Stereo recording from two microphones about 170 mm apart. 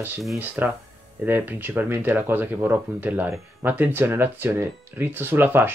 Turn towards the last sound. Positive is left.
turn(degrees=-10)  # may be behind; listen again after turning